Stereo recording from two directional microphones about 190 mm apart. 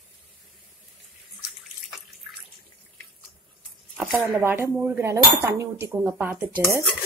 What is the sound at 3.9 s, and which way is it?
Speech, 10° right (ahead or behind).